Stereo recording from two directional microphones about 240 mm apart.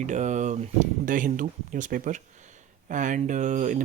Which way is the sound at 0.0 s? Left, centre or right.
Right.